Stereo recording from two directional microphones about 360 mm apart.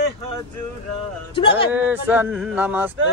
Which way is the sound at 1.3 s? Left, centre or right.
Centre.